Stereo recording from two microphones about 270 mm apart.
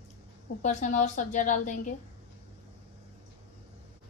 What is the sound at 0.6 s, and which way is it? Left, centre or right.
A woman's voice, left.